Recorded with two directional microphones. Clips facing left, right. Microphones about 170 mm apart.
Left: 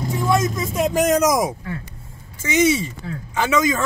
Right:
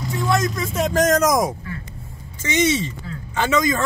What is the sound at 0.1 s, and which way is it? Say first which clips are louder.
A man's voice: left 1 dB; 15° left (ahead or behind).